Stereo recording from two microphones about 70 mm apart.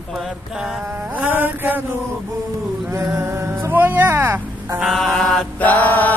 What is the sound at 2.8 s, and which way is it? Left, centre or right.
Music, right.